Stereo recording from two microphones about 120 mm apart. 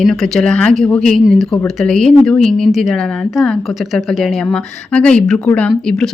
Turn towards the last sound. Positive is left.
turn(degrees=5)  # may be behind; listen again after turning